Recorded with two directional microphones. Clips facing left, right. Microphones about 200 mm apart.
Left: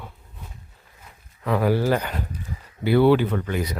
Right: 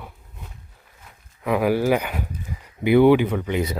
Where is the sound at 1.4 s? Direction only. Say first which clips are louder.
Right 1 dB; 10° right (ahead or behind).